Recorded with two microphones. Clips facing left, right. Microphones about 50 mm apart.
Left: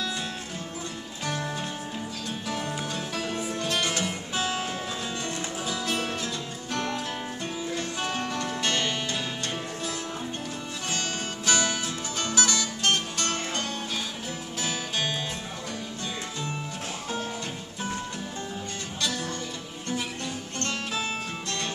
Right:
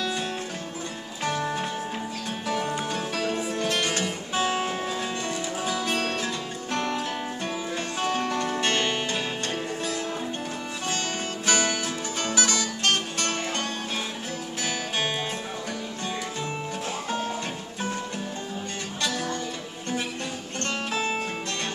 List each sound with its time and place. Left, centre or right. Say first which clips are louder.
1.2 s music: right 4 dB; right
10.9 s music: right 2 dB; right
20.6 s music: right 3 dB; right